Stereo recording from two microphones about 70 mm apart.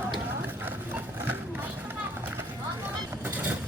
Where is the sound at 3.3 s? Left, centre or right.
Right.